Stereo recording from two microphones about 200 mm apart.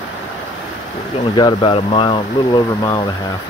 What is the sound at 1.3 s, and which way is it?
Speech, 25° left (ahead or behind).